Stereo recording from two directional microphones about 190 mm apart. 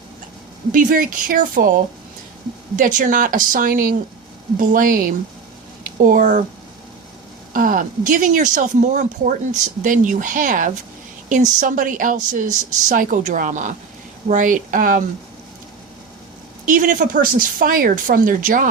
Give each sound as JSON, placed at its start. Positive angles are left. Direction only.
{"t": 0.7, "sound": "speech", "side_deg": -45}
{"t": 7.5, "sound": "speech", "side_deg": -45}
{"t": 16.6, "sound": "speech", "side_deg": -45}